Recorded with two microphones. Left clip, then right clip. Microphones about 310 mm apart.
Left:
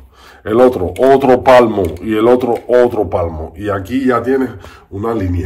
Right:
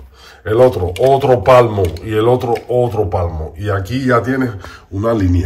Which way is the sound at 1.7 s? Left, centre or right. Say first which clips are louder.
Left 2 dB; centre.